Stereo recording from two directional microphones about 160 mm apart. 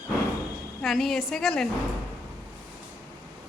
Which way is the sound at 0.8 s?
Centre (ahead or behind).